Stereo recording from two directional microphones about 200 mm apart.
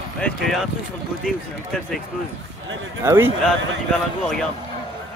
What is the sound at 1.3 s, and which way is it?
Speech, 5° left (ahead or behind).